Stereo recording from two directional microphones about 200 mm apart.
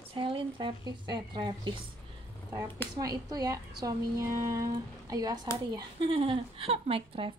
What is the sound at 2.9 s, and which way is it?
A woman's voice, 20° right (ahead or behind).